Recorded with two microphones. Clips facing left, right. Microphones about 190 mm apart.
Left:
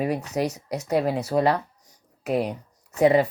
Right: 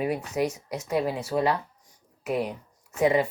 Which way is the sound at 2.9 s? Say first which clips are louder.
Left 4 dB; 40° left (ahead or behind).